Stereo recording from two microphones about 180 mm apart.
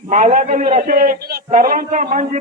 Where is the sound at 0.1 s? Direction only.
45° right (ahead or behind).